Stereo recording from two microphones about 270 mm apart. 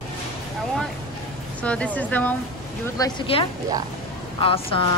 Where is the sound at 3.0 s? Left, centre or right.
Centre.